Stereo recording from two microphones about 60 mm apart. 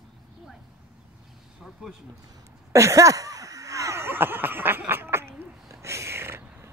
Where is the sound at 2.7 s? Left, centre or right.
Right.